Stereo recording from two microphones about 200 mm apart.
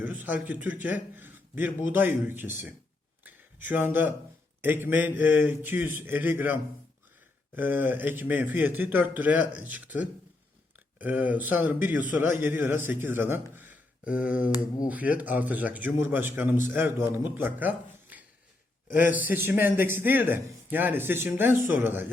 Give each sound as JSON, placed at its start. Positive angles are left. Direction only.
{"t": 0.0, "sound": "a man's voice", "side_deg": -10}
{"t": 3.2, "sound": "a sound", "side_deg": -10}
{"t": 4.6, "sound": "a man's voice", "side_deg": -10}
{"t": 18.9, "sound": "speech", "side_deg": 40}
{"t": 19.1, "sound": "a man's voice", "side_deg": -10}